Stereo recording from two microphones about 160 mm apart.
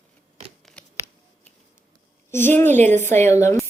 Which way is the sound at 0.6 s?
5° left (ahead or behind).